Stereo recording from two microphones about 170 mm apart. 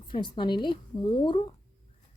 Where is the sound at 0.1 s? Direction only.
30° left (ahead or behind).